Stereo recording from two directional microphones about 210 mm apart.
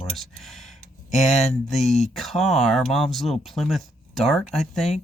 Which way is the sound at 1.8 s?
35° left (ahead or behind).